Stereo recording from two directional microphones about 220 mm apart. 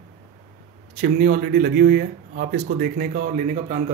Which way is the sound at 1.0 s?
45° right (ahead or behind).